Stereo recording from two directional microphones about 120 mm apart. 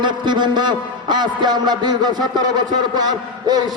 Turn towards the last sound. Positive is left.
turn(degrees=-35)  # may be behind; listen again after turning